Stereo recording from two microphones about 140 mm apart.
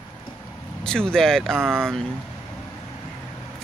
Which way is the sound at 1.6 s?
15° right (ahead or behind).